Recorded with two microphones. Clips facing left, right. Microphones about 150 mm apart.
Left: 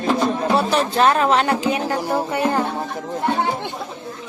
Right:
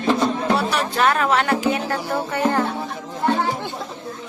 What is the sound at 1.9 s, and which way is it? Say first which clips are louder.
Music: left 2 dB; 15° left (ahead or behind).